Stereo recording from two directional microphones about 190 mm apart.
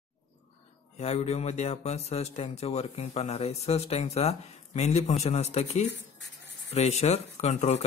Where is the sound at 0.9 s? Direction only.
35° left (ahead or behind).